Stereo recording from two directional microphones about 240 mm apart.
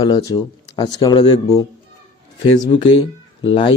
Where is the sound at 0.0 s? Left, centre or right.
Centre.